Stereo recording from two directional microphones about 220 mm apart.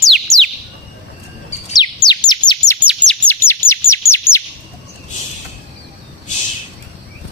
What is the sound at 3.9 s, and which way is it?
Chirp, 10° left (ahead or behind).